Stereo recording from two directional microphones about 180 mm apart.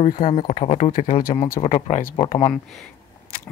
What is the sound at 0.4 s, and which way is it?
Speech, 45° left (ahead or behind).